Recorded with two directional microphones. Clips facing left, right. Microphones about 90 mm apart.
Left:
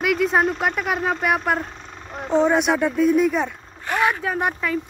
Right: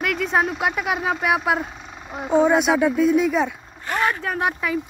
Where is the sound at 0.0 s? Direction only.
Centre (ahead or behind).